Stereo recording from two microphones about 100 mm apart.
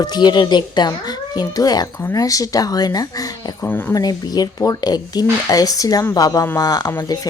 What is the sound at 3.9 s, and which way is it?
Speech, 40° left (ahead or behind).